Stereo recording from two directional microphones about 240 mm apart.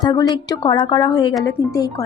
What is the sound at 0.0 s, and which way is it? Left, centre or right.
A woman's voice, centre.